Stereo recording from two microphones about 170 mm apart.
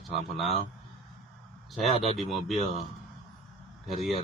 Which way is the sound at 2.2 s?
Centre (ahead or behind).